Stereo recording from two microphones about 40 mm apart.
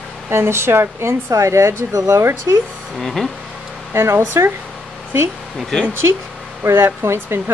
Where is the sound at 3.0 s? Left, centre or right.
Centre.